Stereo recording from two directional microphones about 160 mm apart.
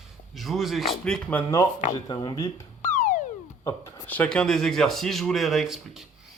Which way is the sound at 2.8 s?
50° left (ahead or behind).